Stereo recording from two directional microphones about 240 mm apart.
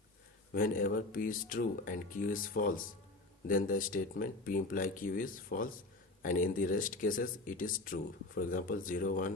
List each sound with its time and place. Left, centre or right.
0.5 s speech: left